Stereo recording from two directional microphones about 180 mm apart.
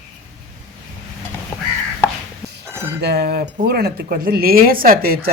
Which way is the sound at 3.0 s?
65° right (ahead or behind).